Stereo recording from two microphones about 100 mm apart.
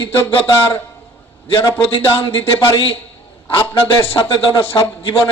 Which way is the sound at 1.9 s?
60° left (ahead or behind).